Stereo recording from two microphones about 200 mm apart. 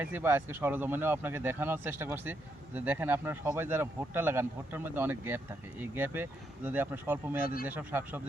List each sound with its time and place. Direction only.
0.0 s speech: 10° right (ahead or behind)
7.4 s speech: 45° left (ahead or behind)
7.7 s speech: 10° right (ahead or behind)